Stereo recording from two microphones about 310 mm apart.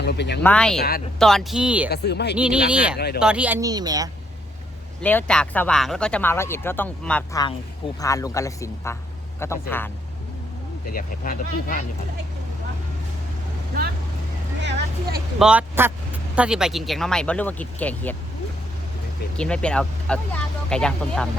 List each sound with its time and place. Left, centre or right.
0.0 s a sound: left
0.4 s speech: centre
0.8 s speech: left
1.2 s speech: centre
1.9 s speech: left
2.3 s speech: centre
5.0 s speech: centre
10.8 s speech: left
14.6 s speech: right
15.4 s speech: centre
19.4 s speech: centre